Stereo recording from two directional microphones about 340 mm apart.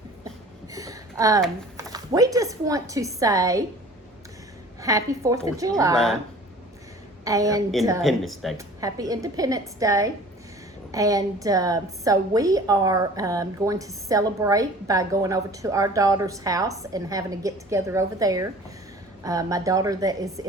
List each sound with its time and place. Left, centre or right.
0.7 s speech: centre
4.8 s a woman's voice: centre
7.3 s a woman's voice: centre